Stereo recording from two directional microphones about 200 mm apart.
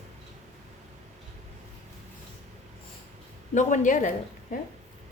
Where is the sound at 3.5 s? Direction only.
40° left (ahead or behind).